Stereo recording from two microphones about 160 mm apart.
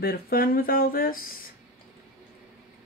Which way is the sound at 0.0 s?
70° left (ahead or behind).